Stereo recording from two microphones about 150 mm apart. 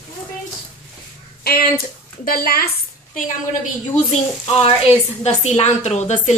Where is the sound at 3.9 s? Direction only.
45° left (ahead or behind).